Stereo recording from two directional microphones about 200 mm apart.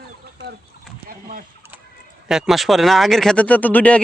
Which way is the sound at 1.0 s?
45° right (ahead or behind).